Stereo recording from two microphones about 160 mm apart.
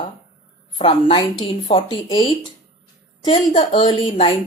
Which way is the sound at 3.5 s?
30° left (ahead or behind).